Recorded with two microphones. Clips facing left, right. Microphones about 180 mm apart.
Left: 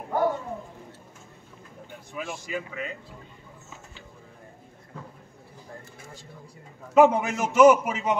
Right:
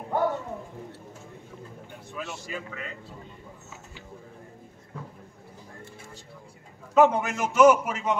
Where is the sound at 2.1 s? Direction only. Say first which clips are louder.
Left 3 dB; 15° left (ahead or behind).